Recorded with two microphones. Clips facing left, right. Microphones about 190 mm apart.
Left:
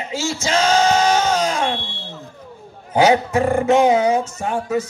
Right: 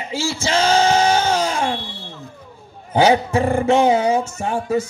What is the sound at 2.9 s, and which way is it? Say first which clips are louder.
Speech: even; 30° right (ahead or behind).